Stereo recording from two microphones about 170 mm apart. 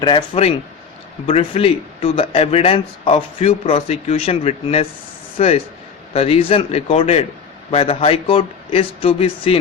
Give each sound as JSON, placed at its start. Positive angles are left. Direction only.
{"t": 0.0, "sound": "a man's voice", "side_deg": 30}